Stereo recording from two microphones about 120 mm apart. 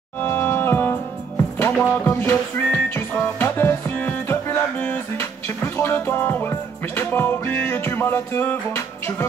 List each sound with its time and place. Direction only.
0.2 s music: 15° left (ahead or behind)